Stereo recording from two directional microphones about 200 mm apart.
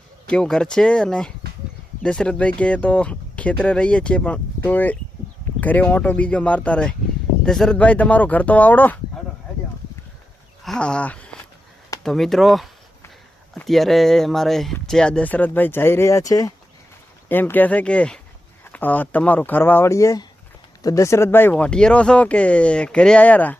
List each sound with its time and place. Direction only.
0.3 s speech: 5° left (ahead or behind)
10.6 s speech: 5° left (ahead or behind)